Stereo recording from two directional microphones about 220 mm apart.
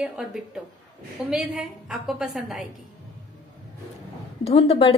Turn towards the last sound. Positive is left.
turn(degrees=25)  # may be behind; listen again after turning